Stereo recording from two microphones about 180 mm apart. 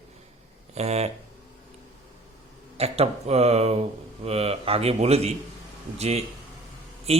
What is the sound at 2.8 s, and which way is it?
Speech, 35° right (ahead or behind).